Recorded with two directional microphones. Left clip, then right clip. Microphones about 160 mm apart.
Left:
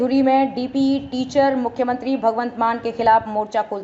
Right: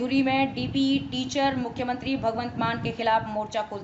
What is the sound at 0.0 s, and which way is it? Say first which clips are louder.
Speech: left 8 dB; 20° left (ahead or behind).